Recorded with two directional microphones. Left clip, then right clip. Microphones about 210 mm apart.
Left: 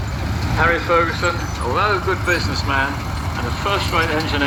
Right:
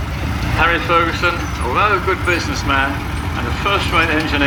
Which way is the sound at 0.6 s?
55° right (ahead or behind).